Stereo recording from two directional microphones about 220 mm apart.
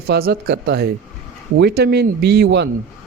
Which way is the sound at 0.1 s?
45° right (ahead or behind).